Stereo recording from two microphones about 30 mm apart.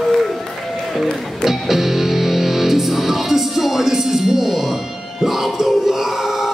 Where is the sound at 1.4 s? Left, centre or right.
Centre.